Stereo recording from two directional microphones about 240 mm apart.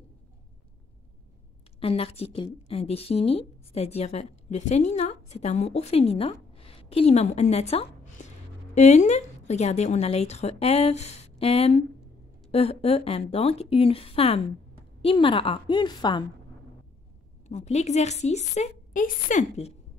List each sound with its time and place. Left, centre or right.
1.8 s a woman's voice: left
17.5 s a woman's voice: left